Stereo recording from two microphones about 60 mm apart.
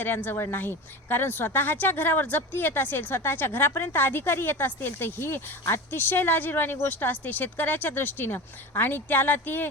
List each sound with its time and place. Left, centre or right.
0.0 s a woman's voice: left